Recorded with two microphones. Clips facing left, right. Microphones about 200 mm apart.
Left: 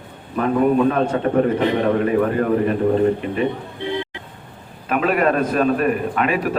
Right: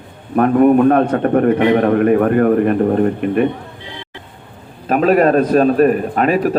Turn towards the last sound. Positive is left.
turn(degrees=-40)  # may be behind; listen again after turning